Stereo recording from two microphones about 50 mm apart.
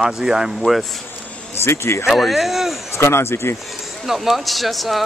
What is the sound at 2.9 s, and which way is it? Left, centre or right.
Speech, left.